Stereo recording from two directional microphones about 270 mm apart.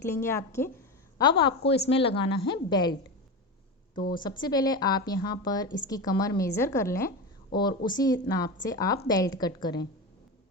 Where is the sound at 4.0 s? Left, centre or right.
Left.